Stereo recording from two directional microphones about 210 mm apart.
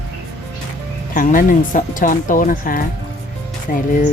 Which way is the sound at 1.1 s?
40° left (ahead or behind).